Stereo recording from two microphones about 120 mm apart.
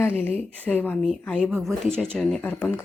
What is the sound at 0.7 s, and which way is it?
Speech, 5° left (ahead or behind).